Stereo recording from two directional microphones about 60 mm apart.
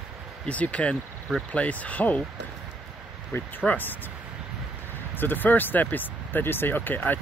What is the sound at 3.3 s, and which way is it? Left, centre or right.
Speech, left.